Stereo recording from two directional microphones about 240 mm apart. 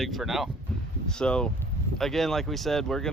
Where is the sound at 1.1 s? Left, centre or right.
Centre.